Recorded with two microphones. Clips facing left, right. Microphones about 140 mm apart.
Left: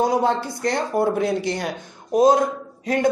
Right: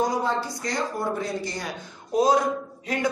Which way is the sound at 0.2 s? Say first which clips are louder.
Left 6 dB; 60° left (ahead or behind).